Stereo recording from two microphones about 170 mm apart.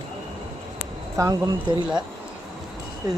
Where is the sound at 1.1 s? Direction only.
20° right (ahead or behind).